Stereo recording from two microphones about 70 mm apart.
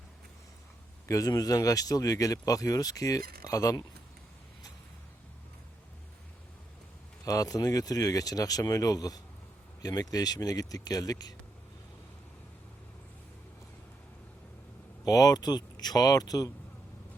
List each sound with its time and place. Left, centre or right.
1.0 s speech: left
7.3 s speech: left
15.0 s speech: left